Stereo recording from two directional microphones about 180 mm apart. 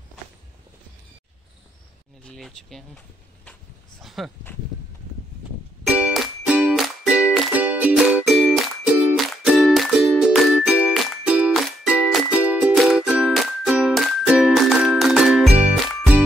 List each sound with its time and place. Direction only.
2.2 s speech: centre (ahead or behind)
4.0 s dog: centre (ahead or behind)
5.9 s music: 5° right (ahead or behind)